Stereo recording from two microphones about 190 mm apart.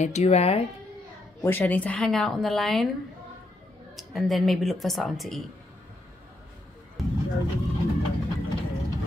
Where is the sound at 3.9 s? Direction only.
Centre (ahead or behind).